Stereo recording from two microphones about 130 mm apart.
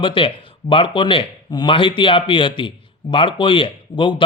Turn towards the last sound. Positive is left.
turn(degrees=40)  # may be behind; listen again after turning